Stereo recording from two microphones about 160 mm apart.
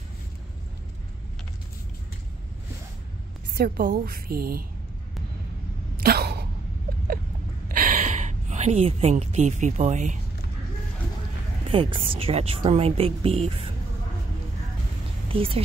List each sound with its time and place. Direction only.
3.5 s a woman's voice: 65° right (ahead or behind)
5.9 s a sound: 75° right (ahead or behind)
7.6 s gasp: 60° right (ahead or behind)
11.6 s a woman's voice: 35° right (ahead or behind)
15.2 s speech: 35° right (ahead or behind)